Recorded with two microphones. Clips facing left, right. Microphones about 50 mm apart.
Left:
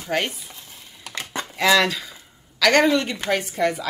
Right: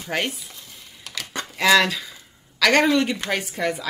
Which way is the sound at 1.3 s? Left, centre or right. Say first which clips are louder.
Left 2 dB; centre.